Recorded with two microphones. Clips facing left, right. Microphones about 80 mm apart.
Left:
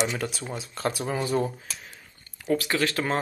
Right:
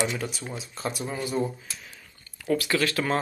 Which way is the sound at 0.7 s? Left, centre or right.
Left.